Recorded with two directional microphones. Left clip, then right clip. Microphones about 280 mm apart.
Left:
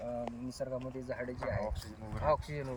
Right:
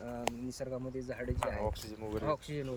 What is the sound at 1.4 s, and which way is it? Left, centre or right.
Speech, centre.